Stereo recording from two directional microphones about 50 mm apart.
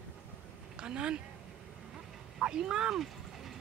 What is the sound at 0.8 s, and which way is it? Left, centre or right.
Speech, centre.